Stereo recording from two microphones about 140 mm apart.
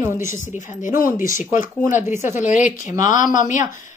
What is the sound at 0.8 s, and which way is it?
Speech, 75° left (ahead or behind).